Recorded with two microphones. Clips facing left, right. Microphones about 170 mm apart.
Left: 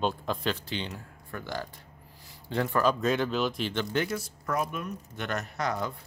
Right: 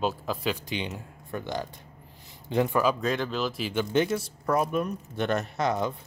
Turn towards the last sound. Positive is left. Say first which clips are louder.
# right 4 dB
turn(degrees=-20)  # may be behind; listen again after turning